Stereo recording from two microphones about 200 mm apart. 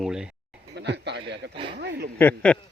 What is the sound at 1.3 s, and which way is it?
Speech, 60° right (ahead or behind).